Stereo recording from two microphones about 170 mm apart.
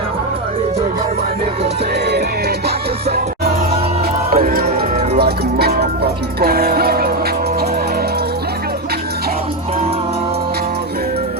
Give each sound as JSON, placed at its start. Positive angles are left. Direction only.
{"t": 4.3, "sound": "music", "side_deg": -55}